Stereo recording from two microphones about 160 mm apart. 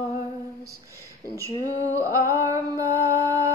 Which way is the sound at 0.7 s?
20° right (ahead or behind).